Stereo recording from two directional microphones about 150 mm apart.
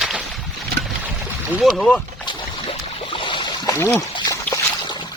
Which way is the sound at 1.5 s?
Centre (ahead or behind).